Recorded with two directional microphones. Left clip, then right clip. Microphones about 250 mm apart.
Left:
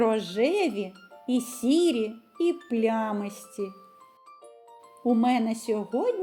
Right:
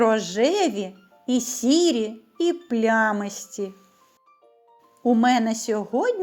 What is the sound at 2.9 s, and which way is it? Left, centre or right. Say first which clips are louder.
Speech: right 10 dB; right.